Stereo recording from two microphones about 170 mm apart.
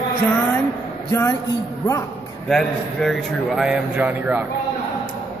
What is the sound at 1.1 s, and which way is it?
Speech, 20° left (ahead or behind).